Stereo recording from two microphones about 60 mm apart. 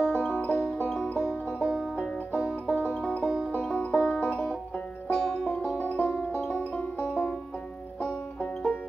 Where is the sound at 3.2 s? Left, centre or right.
Centre.